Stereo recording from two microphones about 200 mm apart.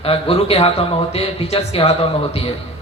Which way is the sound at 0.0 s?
30° left (ahead or behind).